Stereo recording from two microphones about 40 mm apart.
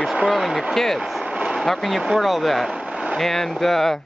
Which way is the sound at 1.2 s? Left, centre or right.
Centre.